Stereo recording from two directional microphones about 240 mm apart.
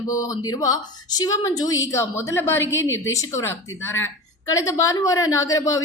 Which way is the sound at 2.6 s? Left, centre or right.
Left.